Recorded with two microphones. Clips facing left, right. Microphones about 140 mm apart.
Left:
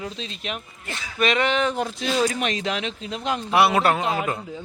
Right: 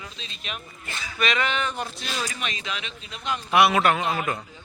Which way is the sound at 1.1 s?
45° left (ahead or behind).